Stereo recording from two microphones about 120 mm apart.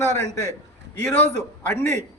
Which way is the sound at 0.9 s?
15° left (ahead or behind).